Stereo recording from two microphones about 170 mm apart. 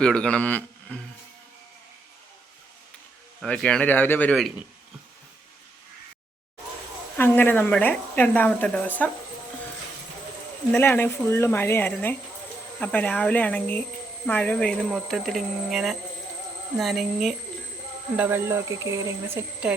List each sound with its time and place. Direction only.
0.0 s speech: 5° left (ahead or behind)
3.4 s a woman's voice: 5° left (ahead or behind)
7.2 s a woman's voice: 10° left (ahead or behind)
10.8 s a woman's voice: 15° left (ahead or behind)
18.2 s speech: 15° right (ahead or behind)
19.6 s speech: 5° right (ahead or behind)